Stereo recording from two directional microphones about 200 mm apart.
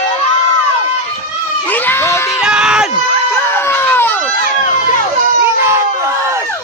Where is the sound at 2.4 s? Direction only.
5° right (ahead or behind).